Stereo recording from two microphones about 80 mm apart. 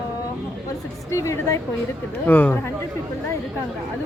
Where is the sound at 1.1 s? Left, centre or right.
Left.